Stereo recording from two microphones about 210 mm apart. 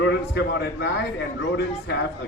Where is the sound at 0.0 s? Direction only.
55° left (ahead or behind).